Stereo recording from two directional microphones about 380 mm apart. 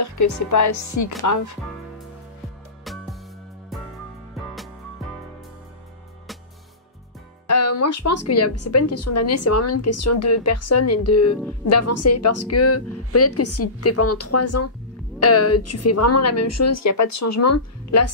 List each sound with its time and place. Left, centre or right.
0.0 s speech: left
2.8 s music: centre
7.4 s speech: left